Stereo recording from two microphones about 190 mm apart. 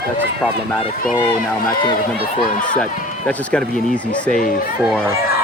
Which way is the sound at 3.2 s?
5° left (ahead or behind).